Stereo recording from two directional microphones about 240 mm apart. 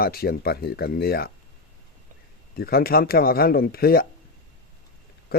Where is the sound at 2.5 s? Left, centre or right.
Left.